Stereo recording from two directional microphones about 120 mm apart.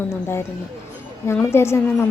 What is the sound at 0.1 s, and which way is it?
Speech, 20° left (ahead or behind).